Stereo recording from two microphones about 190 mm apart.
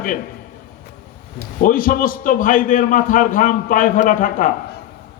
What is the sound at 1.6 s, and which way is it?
A man's voice, 45° left (ahead or behind).